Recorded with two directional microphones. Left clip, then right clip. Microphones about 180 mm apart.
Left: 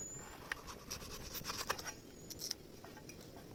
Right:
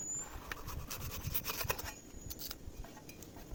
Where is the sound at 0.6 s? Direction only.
10° right (ahead or behind).